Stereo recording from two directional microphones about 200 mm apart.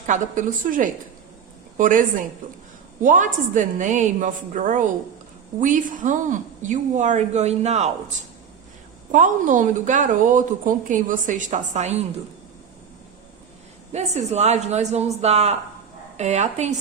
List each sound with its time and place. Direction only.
0.0 s a woman's voice: 40° right (ahead or behind)
9.1 s a woman's voice: 40° right (ahead or behind)
13.9 s a woman's voice: 35° right (ahead or behind)